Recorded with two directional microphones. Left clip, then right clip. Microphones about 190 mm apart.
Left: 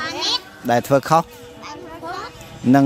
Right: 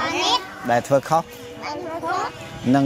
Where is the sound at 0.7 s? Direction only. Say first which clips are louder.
Left 2 dB; 70° left (ahead or behind).